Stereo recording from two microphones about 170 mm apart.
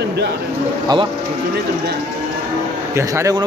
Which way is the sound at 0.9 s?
25° right (ahead or behind).